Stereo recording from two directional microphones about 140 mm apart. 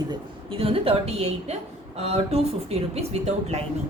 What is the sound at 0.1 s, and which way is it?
A woman's voice, 40° right (ahead or behind).